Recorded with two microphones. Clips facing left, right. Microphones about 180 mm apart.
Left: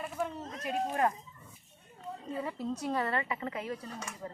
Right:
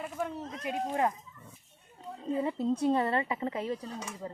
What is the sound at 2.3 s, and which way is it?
A woman's voice, 20° right (ahead or behind).